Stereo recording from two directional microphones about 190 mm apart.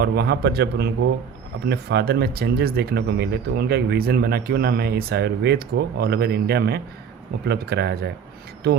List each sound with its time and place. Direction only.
0.0 s speech: 55° right (ahead or behind)